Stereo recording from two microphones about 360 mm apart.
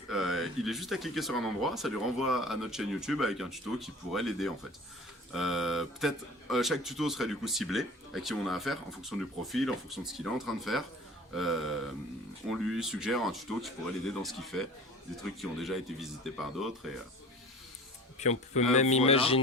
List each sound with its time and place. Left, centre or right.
0.1 s speech: centre
18.2 s speech: centre